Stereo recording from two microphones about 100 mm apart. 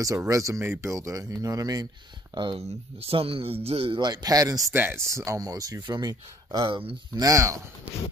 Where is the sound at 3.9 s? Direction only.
45° right (ahead or behind).